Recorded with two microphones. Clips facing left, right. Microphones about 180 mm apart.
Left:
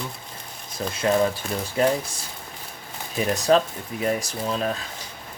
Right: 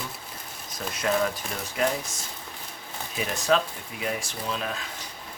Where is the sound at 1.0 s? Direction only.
30° left (ahead or behind).